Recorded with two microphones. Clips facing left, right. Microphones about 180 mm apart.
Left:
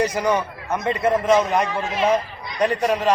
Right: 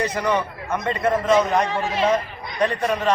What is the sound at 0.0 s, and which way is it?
A man's voice, 10° left (ahead or behind).